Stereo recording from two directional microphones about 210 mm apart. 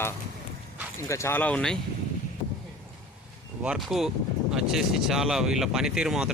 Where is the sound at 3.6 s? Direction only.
5° right (ahead or behind).